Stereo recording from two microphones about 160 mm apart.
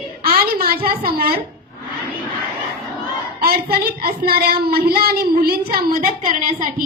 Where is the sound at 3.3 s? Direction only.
70° right (ahead or behind); by 6.8 s 50° right (ahead or behind).